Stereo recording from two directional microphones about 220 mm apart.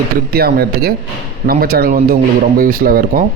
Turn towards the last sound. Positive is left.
turn(degrees=-40)  # may be behind; listen again after turning